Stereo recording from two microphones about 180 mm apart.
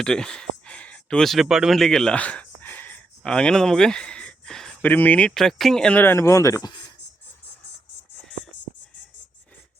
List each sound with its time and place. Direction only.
0.0 s speech: 5° left (ahead or behind); by 6.8 s 25° left (ahead or behind)